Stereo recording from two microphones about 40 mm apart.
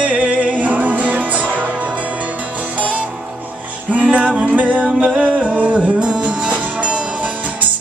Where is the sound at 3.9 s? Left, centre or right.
Right.